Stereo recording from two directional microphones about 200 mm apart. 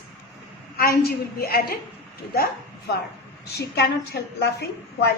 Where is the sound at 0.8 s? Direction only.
50° left (ahead or behind).